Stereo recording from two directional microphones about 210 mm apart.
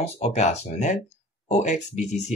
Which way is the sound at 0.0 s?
30° left (ahead or behind).